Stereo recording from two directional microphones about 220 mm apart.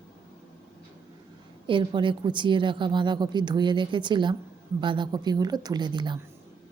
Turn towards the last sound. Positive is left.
turn(degrees=-20)  # may be behind; listen again after turning